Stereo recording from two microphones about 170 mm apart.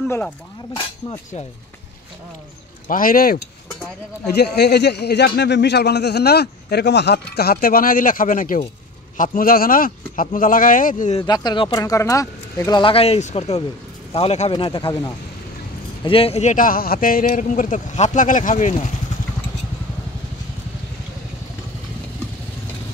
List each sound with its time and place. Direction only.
2.9 s speech: 55° left (ahead or behind)
4.3 s speech: 75° left (ahead or behind); by 11.1 s 50° left (ahead or behind)
11.1 s speech: 25° left (ahead or behind)
16.0 s a man's voice: 35° left (ahead or behind)